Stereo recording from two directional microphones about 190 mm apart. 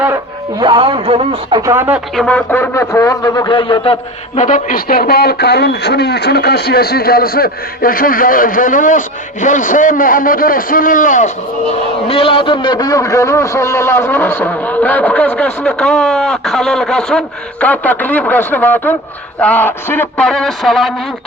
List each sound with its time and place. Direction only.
0.6 s speech: 25° right (ahead or behind)
1.7 s speech: 10° right (ahead or behind)
2.1 s a man's voice: 5° left (ahead or behind); by 3.9 s 25° left (ahead or behind)
4.4 s speech: 40° left (ahead or behind)
12.0 s a man's voice: 30° left (ahead or behind); by 20.9 s centre (ahead or behind)